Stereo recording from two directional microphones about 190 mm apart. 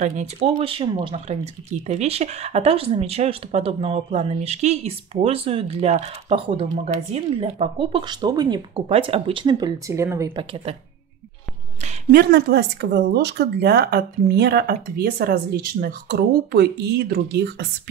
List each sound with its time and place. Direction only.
0.0 s speech: 40° right (ahead or behind); by 10.3 s 15° right (ahead or behind)
10.3 s speech: 30° right (ahead or behind)
11.8 s speech: 50° right (ahead or behind)